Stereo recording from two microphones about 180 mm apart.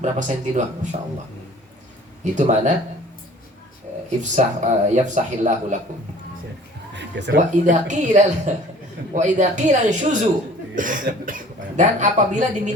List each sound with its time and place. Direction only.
0.0 s a man's voice: 45° right (ahead or behind)
2.2 s a man's voice: 45° right (ahead or behind)
4.2 s a man's voice: 40° right (ahead or behind)
6.9 s a sound: 75° right (ahead or behind)
7.3 s a man's voice: 45° right (ahead or behind)